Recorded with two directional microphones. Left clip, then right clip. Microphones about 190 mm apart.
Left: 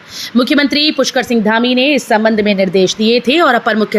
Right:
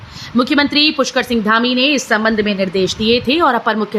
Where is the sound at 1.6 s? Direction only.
50° right (ahead or behind).